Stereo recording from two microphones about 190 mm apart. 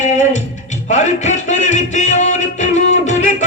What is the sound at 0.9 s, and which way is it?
Music, 40° left (ahead or behind).